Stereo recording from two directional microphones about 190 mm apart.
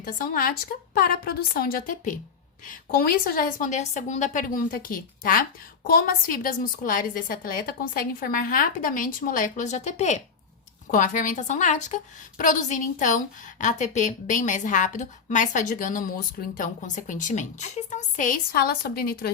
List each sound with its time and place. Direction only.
0.0 s a woman's voice: 50° left (ahead or behind)